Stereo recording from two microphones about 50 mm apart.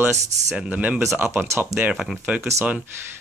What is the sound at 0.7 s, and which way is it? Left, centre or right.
Speech, right.